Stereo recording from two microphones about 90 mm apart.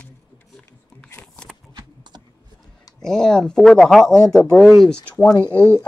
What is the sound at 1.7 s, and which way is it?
Typing, 55° right (ahead or behind).